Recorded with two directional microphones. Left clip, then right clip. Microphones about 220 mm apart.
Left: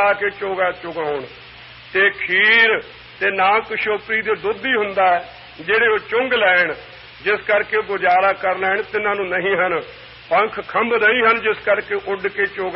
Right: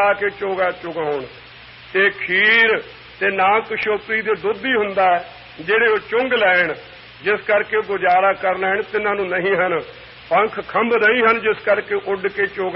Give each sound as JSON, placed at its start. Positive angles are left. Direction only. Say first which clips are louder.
{"t": 0.0, "sound": "a man's voice", "louder": "even", "side_deg": -35}